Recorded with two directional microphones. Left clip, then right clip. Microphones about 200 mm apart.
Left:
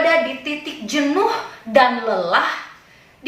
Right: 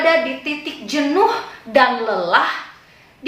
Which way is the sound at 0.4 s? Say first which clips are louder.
Right 1 dB; 10° right (ahead or behind).